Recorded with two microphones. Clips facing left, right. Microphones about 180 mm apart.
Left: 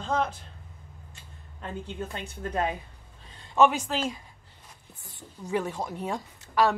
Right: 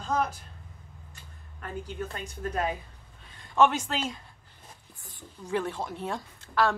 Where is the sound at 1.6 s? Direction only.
25° left (ahead or behind).